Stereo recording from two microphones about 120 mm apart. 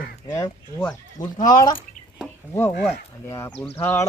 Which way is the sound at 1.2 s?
35° left (ahead or behind).